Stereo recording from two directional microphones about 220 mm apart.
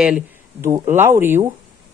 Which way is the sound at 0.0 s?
10° right (ahead or behind).